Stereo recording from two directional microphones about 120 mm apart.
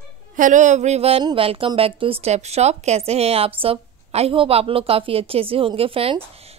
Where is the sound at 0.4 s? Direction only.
90° right; by 1.2 s 60° right (ahead or behind).